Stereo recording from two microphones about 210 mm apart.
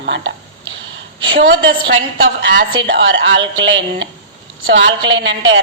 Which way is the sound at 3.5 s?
60° right (ahead or behind).